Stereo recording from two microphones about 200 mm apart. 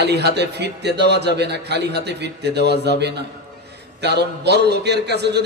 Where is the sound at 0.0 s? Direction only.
55° right (ahead or behind).